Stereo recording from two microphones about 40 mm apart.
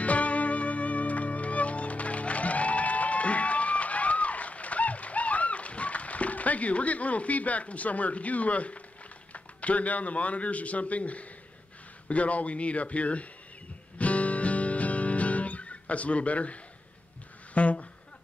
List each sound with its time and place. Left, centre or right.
0.0 s music: left
9.3 s speech: left
13.9 s music: left
17.6 s speech: left